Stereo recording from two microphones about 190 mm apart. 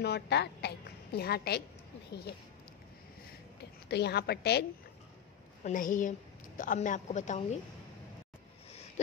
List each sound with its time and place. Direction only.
0.0 s a woman's voice: 60° left (ahead or behind)
3.9 s a woman's voice: 60° left (ahead or behind)
5.6 s a woman's voice: 45° left (ahead or behind)